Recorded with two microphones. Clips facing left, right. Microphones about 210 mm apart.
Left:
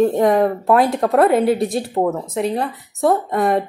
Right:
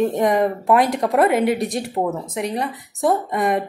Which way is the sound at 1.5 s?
25° left (ahead or behind).